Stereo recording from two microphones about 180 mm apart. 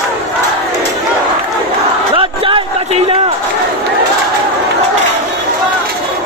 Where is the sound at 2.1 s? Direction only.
30° right (ahead or behind).